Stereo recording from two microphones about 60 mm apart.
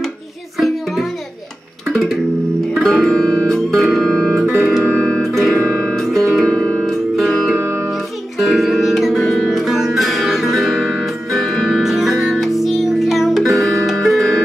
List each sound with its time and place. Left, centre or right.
0.6 s music: centre
2.7 s music: centre
3.4 s music: centre
4.6 s music: centre
4.8 s music: centre
5.2 s music: centre
5.5 s music: centre
5.9 s music: centre
6.4 s music: centre
6.8 s music: centre